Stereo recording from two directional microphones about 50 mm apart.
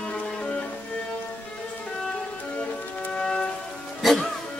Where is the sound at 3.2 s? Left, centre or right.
Centre.